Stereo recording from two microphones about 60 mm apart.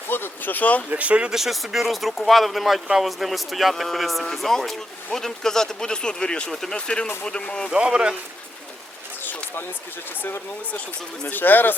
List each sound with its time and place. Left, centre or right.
0.1 s speech: left
0.9 s speech: right
1.3 s speech: centre
7.7 s speech: centre
11.3 s speech: left